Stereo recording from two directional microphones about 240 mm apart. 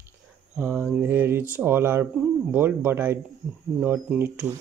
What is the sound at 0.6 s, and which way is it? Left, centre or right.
Speech, centre.